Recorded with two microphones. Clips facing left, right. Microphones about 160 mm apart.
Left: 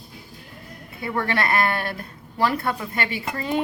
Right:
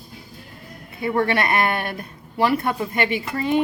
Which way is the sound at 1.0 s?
20° right (ahead or behind).